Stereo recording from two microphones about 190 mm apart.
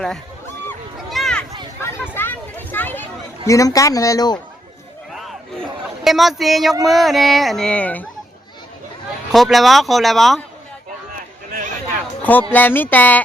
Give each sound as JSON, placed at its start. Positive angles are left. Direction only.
{"t": 0.9, "sound": "a sound", "side_deg": 0}
{"t": 3.4, "sound": "speech", "side_deg": 15}
{"t": 6.1, "sound": "a child's voice", "side_deg": 0}
{"t": 9.3, "sound": "a child's voice", "side_deg": 0}
{"t": 12.2, "sound": "speech", "side_deg": 10}